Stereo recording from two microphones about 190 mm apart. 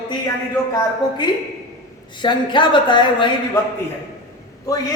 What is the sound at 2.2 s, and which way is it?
A woman's voice, 25° left (ahead or behind).